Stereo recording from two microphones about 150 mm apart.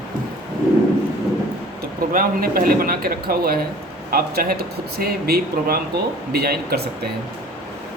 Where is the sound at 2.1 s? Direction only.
75° right (ahead or behind); by 6.8 s 90° right.